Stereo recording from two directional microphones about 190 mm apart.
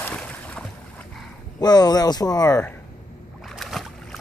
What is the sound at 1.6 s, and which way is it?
Speech, 20° left (ahead or behind).